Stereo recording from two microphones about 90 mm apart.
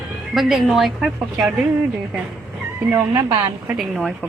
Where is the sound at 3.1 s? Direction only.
55° right (ahead or behind).